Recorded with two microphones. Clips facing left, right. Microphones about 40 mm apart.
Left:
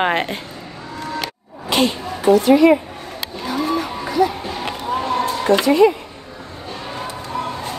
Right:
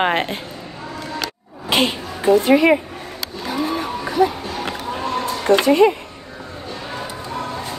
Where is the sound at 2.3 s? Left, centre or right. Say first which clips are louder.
Left 2 dB; right.